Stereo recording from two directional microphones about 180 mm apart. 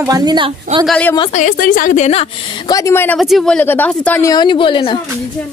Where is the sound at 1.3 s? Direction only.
45° left (ahead or behind).